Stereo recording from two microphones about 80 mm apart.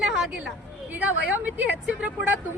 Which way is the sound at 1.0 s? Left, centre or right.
Centre.